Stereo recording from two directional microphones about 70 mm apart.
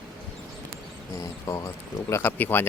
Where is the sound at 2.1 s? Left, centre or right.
Left.